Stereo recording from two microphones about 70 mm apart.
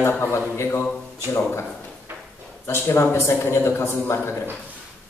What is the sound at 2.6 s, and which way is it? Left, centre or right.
Speech, left.